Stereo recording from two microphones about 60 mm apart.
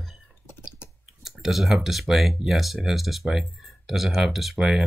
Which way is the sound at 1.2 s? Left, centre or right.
Centre.